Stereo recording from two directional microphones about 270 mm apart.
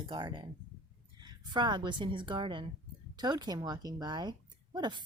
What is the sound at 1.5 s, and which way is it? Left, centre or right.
A woman's voice, centre.